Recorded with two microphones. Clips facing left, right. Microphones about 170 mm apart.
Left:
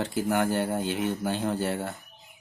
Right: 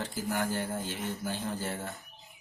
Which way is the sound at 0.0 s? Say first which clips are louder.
Left 7 dB; 65° left (ahead or behind).